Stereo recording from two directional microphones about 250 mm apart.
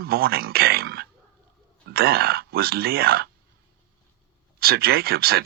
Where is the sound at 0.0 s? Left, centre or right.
Right.